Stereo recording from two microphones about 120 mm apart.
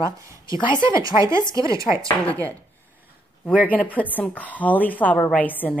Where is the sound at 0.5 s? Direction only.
40° left (ahead or behind).